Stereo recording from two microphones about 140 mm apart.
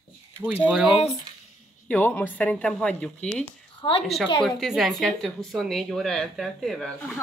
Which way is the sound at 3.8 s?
30° left (ahead or behind).